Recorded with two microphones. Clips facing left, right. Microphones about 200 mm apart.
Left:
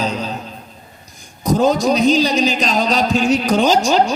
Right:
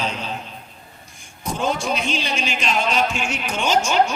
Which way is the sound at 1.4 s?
40° left (ahead or behind).